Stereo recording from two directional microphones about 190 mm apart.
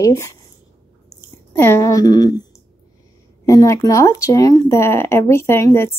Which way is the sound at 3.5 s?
15° left (ahead or behind).